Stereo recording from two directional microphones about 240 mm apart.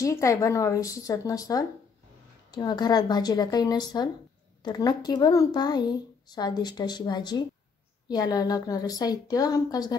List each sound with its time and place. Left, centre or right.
0.0 s speech: centre